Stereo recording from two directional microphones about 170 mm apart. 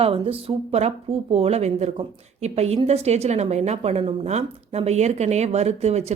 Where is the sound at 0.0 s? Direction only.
35° right (ahead or behind).